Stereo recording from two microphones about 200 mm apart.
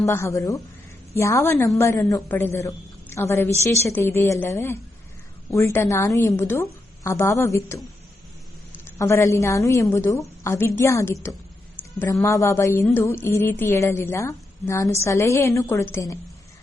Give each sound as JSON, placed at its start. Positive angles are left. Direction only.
{"t": 0.0, "sound": "a woman's voice", "side_deg": 15}
{"t": 9.0, "sound": "a woman's voice", "side_deg": 15}